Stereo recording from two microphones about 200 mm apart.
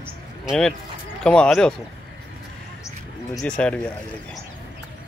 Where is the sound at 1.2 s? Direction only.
5° left (ahead or behind).